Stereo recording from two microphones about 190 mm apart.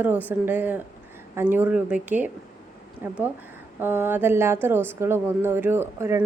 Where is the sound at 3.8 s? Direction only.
10° right (ahead or behind).